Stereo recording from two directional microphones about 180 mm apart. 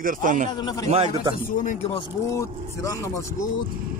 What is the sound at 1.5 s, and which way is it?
Speech, 40° left (ahead or behind).